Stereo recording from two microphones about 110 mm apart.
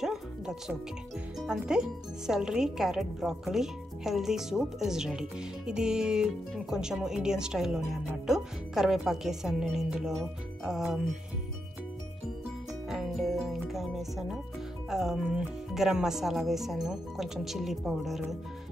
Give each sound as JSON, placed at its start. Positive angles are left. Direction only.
{"t": 0.0, "sound": "music", "side_deg": -5}
{"t": 1.4, "sound": "speech", "side_deg": -5}
{"t": 12.9, "sound": "speech", "side_deg": -5}